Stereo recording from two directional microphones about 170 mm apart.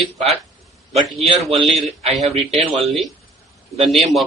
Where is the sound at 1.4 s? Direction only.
30° right (ahead or behind).